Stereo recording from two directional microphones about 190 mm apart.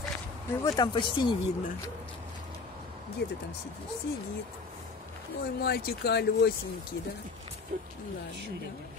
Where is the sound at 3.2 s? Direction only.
60° left (ahead or behind).